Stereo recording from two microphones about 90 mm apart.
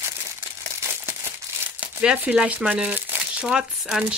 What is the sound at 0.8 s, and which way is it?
Crumpling, 30° right (ahead or behind).